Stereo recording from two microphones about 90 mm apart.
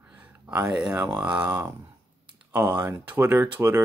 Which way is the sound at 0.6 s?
5° right (ahead or behind).